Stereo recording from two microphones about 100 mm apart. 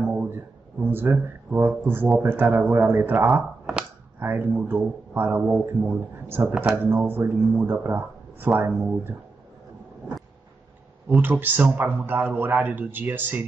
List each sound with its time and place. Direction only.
0.0 s a sound: 20° right (ahead or behind)
2.2 s speech: 20° right (ahead or behind)
11.1 s speech: 20° right (ahead or behind)